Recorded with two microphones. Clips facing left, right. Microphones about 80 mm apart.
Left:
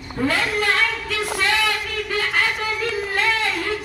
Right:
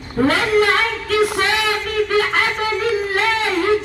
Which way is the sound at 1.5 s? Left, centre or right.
Right.